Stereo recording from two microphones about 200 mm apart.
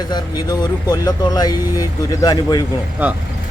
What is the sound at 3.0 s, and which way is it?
Speech, 10° right (ahead or behind).